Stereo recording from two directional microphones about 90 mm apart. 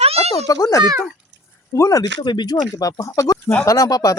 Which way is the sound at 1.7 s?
30° left (ahead or behind).